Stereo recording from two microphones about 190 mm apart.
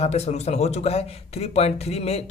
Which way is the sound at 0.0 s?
35° left (ahead or behind).